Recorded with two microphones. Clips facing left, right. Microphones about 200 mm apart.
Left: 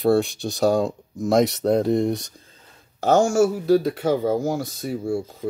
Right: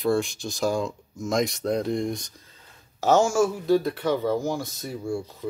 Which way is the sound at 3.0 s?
65° left (ahead or behind).